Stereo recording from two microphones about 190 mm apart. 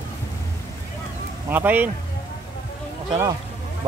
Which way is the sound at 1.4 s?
10° right (ahead or behind).